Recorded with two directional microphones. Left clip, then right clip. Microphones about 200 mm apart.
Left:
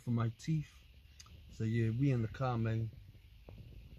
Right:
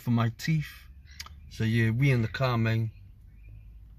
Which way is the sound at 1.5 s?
Centre (ahead or behind).